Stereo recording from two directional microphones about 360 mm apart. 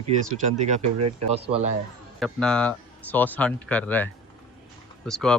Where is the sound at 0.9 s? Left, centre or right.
Right.